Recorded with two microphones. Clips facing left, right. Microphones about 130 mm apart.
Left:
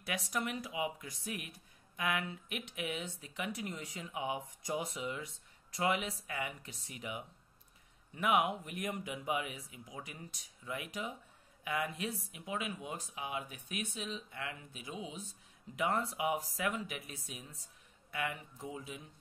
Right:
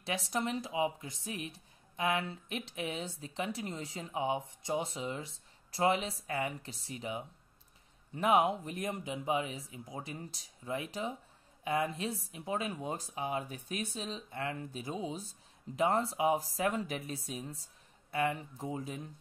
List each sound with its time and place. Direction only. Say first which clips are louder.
0.0 s a woman's voice: right 3 dB; 30° right (ahead or behind)